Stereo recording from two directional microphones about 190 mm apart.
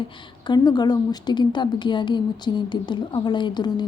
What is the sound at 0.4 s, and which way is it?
A woman's voice, 20° left (ahead or behind).